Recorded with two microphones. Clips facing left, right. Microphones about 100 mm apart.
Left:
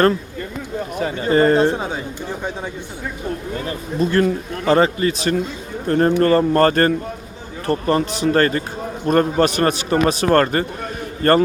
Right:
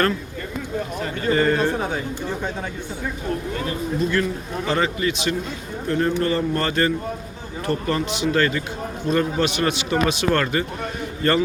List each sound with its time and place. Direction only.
0.9 s speech: 15° left (ahead or behind)
1.3 s a man's voice: 35° left (ahead or behind)
1.6 s speech: 15° left (ahead or behind)
3.7 s a man's voice: 35° left (ahead or behind)
7.7 s a man's voice: 35° left (ahead or behind)